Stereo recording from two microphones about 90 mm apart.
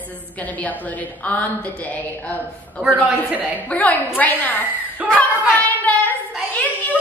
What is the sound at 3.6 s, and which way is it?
A woman's voice, 15° left (ahead or behind).